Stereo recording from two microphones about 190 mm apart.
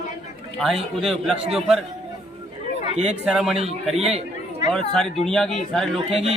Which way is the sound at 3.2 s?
5° right (ahead or behind).